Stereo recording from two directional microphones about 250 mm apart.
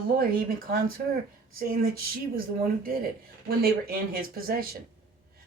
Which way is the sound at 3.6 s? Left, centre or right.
Right.